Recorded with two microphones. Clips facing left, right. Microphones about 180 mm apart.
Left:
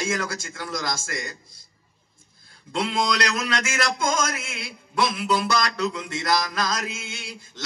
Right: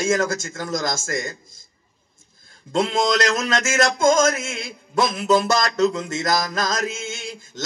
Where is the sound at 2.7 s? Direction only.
45° right (ahead or behind).